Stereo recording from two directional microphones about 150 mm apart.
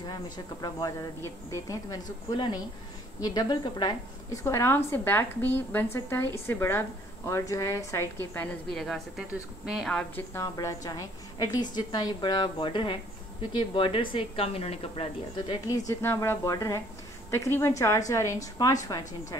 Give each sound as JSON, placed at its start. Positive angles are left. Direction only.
{"t": 0.0, "sound": "a woman's voice", "side_deg": 25}
{"t": 2.3, "sound": "a woman's voice", "side_deg": 30}
{"t": 10.3, "sound": "a woman's voice", "side_deg": 20}
{"t": 15.9, "sound": "a woman's voice", "side_deg": 15}